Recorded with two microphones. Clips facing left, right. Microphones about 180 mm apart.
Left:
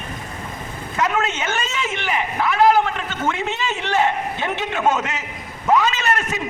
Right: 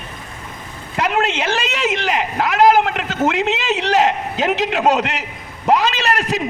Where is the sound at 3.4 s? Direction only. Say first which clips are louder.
Right 5 dB; 90° right.